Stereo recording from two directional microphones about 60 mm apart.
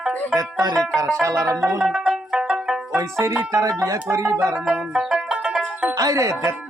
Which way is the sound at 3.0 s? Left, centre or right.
Right.